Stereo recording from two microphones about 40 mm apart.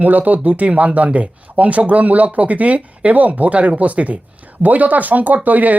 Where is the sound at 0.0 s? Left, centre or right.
Right.